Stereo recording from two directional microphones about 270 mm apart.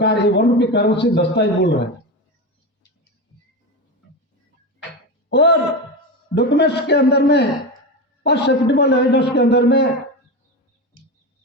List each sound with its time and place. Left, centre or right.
0.0 s a man's voice: left
5.3 s a man's voice: left